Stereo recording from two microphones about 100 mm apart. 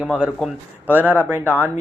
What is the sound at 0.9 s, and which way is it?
Speech, 15° right (ahead or behind).